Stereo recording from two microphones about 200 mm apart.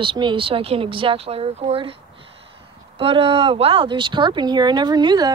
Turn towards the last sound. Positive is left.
turn(degrees=-20)  # may be behind; listen again after turning